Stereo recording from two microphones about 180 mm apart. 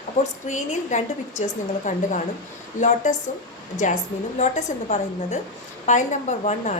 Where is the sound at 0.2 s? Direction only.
40° left (ahead or behind).